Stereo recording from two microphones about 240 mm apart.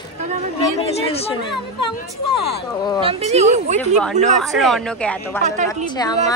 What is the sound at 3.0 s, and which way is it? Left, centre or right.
Speech, right.